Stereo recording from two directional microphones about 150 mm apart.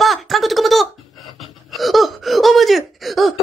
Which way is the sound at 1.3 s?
Centre (ahead or behind).